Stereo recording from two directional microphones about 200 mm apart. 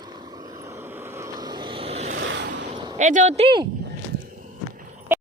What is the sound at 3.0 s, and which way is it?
Speech, 40° right (ahead or behind).